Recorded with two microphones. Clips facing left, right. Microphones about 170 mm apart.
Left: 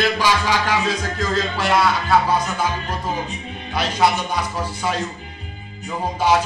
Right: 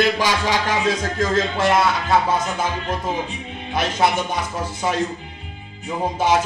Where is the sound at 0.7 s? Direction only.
25° right (ahead or behind).